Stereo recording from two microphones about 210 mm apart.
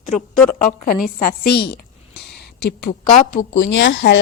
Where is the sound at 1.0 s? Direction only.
45° left (ahead or behind).